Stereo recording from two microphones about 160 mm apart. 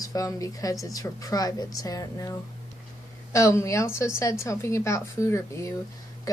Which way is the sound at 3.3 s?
20° left (ahead or behind).